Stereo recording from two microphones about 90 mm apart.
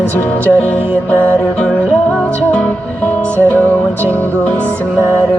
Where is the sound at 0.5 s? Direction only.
20° left (ahead or behind).